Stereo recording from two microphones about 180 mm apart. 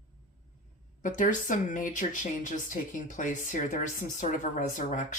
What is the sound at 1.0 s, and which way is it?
Speech, 45° left (ahead or behind).